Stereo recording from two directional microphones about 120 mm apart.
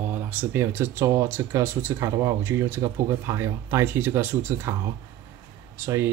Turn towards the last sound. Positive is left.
turn(degrees=-25)  # may be behind; listen again after turning